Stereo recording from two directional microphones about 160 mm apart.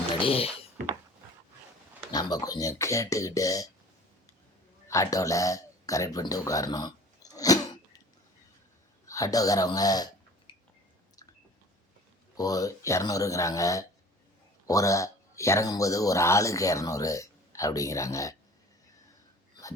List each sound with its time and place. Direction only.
0.1 s speech: 35° left (ahead or behind)
2.1 s speech: 25° left (ahead or behind)
4.9 s a sound: 20° left (ahead or behind)
9.0 s speech: 20° left (ahead or behind)
12.4 s speech: 20° left (ahead or behind)